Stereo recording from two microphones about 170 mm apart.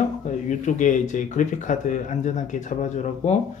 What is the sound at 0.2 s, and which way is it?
Speech, 50° left (ahead or behind).